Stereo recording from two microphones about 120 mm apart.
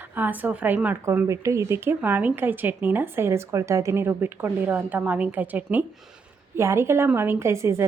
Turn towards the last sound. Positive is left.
turn(degrees=-20)  # may be behind; listen again after turning